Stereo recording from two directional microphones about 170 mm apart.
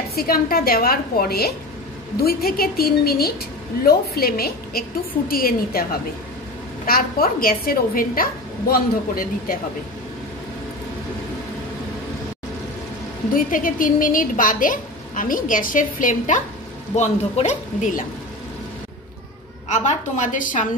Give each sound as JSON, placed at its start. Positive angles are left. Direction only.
{"t": 0.1, "sound": "a woman's voice", "side_deg": 60}
{"t": 6.9, "sound": "a woman's voice", "side_deg": 60}
{"t": 13.3, "sound": "speech", "side_deg": 55}
{"t": 19.7, "sound": "speech", "side_deg": 45}